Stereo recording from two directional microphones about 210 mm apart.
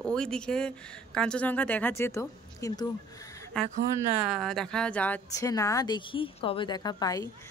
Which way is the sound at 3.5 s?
5° left (ahead or behind).